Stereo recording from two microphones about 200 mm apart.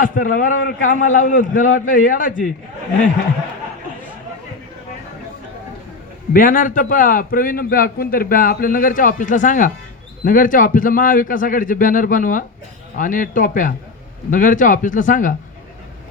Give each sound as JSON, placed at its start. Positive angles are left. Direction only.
{"t": 0.0, "sound": "a man's voice", "side_deg": 40}
{"t": 6.3, "sound": "a man's voice", "side_deg": 40}